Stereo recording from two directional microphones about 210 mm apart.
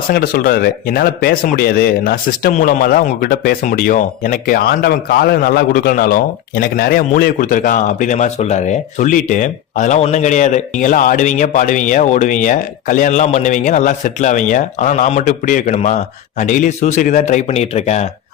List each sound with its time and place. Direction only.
0.1 s a man's voice: 45° left (ahead or behind)